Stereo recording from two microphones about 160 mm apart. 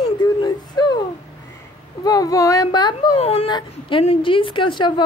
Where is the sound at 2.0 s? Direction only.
20° left (ahead or behind).